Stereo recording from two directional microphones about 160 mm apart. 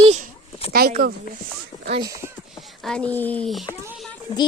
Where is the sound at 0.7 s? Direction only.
70° right (ahead or behind).